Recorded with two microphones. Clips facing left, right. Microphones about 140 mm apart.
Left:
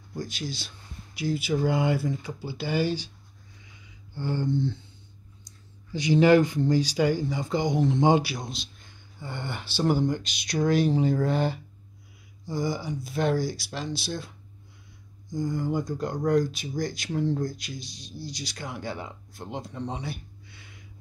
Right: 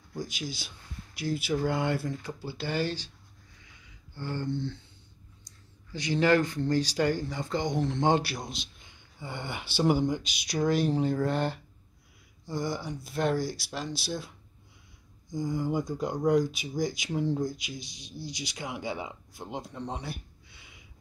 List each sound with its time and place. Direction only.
0.2 s speech: 10° right (ahead or behind); by 3.1 s 10° left (ahead or behind)
4.1 s speech: 15° left (ahead or behind)
5.5 s a sound: 10° left (ahead or behind)
5.9 s speech: 15° left (ahead or behind)
9.2 s speech: 10° right (ahead or behind)
15.3 s speech: 10° right (ahead or behind)